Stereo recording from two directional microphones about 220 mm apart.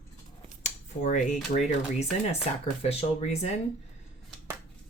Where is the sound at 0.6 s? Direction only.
35° left (ahead or behind).